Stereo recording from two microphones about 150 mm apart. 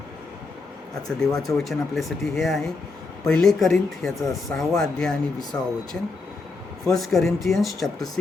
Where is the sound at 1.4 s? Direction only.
Centre (ahead or behind).